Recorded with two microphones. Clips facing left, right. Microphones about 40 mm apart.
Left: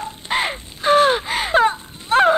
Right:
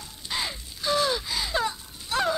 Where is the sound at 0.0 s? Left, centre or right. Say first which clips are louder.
Left 10 dB; left.